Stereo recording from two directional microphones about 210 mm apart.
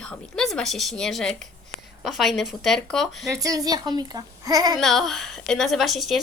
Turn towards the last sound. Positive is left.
turn(degrees=0)  # may be behind; listen again after turning